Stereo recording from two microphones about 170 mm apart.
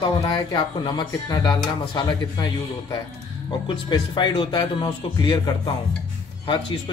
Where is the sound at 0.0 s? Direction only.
25° left (ahead or behind).